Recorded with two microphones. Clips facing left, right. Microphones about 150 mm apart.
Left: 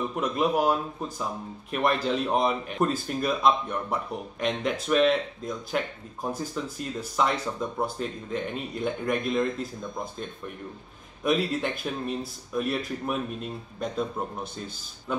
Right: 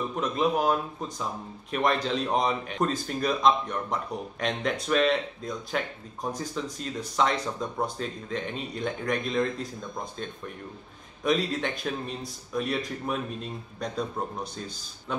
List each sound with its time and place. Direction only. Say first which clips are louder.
0.1 s speech: even; 10° left (ahead or behind)
11.2 s speech: left 1 dB; 5° left (ahead or behind)